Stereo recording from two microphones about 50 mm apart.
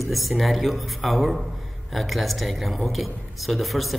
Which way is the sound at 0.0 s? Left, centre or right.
Centre.